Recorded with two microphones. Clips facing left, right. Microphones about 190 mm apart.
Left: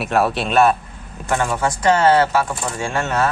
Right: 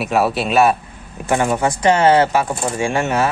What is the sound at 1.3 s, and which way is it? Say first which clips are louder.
Speech: right 3 dB; 15° right (ahead or behind).